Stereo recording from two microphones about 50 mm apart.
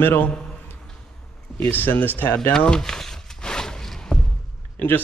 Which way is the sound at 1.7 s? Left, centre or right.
Left.